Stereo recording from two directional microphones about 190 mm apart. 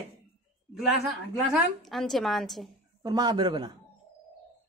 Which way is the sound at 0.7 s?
Centre (ahead or behind).